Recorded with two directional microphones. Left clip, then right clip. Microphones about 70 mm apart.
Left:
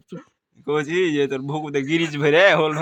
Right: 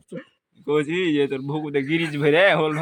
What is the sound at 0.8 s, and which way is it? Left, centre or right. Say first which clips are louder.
Speech: left 2 dB; left.